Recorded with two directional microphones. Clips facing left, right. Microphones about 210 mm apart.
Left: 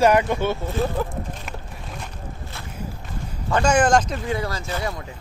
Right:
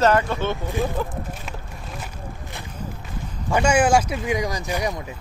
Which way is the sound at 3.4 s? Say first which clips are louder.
Even; 10° right (ahead or behind).